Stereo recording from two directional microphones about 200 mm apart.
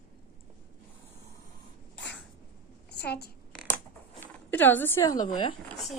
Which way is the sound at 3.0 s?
55° left (ahead or behind).